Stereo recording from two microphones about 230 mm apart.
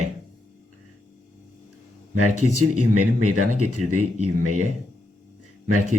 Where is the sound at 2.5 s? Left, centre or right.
Right.